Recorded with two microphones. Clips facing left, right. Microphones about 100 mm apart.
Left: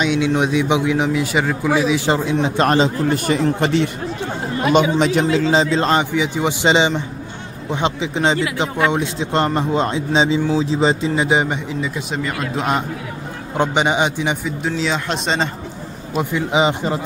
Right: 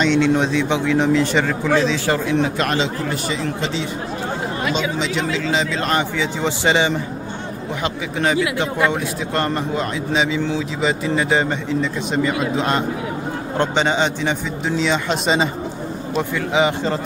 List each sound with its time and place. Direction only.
0.0 s a man's voice: 10° left (ahead or behind)
2.4 s speech: 35° left (ahead or behind)
3.6 s speech: 60° left (ahead or behind)
4.9 s speech: 50° left (ahead or behind)
5.3 s speech: 35° left (ahead or behind)
11.1 s a man's voice: 15° left (ahead or behind)
12.1 s a man's voice: centre (ahead or behind); by 14.3 s 15° left (ahead or behind)
14.6 s speech: centre (ahead or behind)
16.2 s a man's voice: 20° left (ahead or behind)